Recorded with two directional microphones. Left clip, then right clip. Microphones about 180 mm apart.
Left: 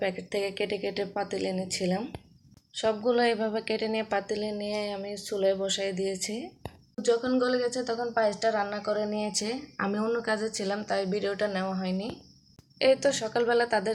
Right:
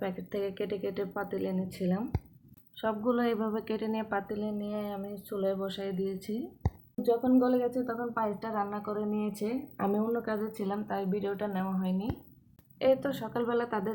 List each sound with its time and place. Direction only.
0.0 s a woman's voice: 10° left (ahead or behind)